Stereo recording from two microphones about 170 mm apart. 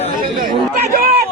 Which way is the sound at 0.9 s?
60° right (ahead or behind).